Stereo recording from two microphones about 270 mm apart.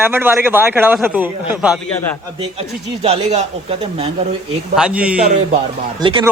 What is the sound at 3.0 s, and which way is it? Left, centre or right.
Speech, right.